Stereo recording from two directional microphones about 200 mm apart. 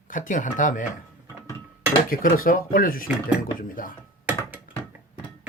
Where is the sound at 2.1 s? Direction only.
45° left (ahead or behind).